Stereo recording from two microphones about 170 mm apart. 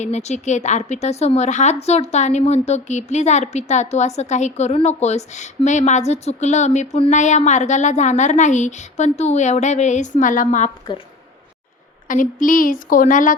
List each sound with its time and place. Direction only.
0.0 s a woman's voice: 40° left (ahead or behind)
12.0 s a woman's voice: 50° left (ahead or behind)